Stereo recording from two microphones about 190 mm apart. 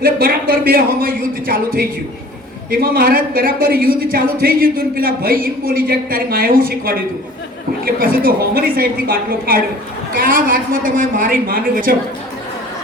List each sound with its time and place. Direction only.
0.0 s a woman's voice: 50° right (ahead or behind)